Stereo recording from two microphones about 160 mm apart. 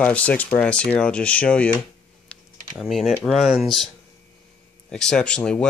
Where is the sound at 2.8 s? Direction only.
Centre (ahead or behind).